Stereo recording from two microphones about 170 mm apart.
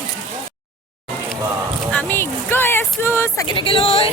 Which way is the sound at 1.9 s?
10° left (ahead or behind).